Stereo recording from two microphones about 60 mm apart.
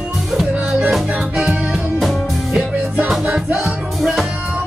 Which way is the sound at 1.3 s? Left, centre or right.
Centre.